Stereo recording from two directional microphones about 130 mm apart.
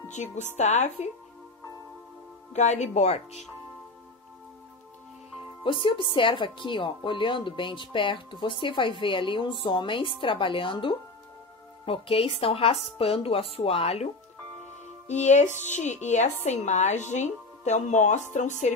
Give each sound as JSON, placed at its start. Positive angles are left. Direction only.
{"t": 0.1, "sound": "a woman's voice", "side_deg": 65}
{"t": 2.5, "sound": "a woman's voice", "side_deg": 65}
{"t": 5.6, "sound": "speech", "side_deg": 40}
{"t": 15.0, "sound": "a woman's voice", "side_deg": 65}